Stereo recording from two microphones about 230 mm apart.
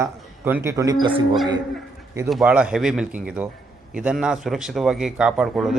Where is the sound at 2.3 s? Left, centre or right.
Centre.